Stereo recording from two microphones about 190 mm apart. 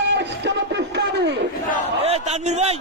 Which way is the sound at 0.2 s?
65° right (ahead or behind).